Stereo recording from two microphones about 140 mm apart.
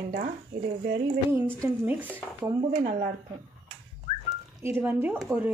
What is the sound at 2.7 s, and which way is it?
Speech, 60° right (ahead or behind).